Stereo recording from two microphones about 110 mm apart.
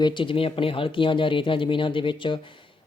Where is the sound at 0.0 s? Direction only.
45° left (ahead or behind).